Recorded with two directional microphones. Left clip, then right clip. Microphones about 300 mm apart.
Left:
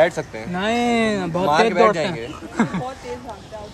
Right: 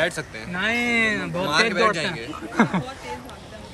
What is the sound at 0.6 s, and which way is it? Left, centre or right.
Speech, centre.